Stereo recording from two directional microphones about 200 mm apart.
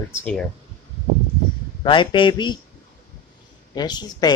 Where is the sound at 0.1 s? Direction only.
10° left (ahead or behind).